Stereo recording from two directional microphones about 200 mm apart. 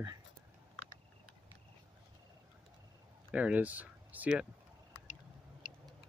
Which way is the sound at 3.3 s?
5° right (ahead or behind).